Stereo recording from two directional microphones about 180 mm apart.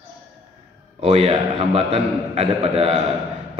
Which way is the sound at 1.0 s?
35° right (ahead or behind).